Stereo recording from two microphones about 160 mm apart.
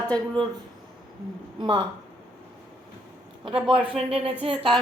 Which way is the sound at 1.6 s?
30° right (ahead or behind).